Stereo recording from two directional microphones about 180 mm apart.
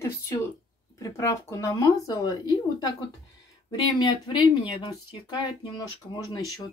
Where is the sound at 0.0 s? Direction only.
15° left (ahead or behind).